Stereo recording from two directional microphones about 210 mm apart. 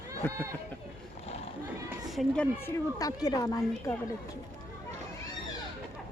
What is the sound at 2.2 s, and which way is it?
Speech, 5° left (ahead or behind).